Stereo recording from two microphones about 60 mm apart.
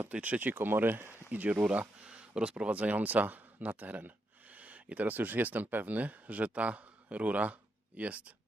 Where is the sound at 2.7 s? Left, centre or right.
Right.